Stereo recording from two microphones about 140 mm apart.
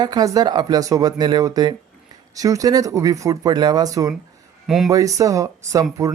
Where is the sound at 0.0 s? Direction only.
30° right (ahead or behind).